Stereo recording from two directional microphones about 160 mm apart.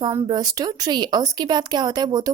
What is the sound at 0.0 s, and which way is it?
A woman's voice, 25° right (ahead or behind).